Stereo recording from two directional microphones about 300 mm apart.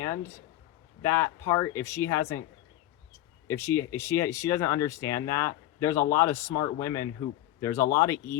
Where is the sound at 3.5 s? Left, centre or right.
Centre.